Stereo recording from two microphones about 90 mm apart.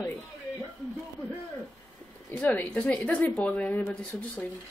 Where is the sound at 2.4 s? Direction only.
15° left (ahead or behind).